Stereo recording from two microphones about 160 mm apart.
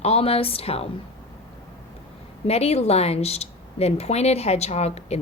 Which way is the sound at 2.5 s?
40° left (ahead or behind).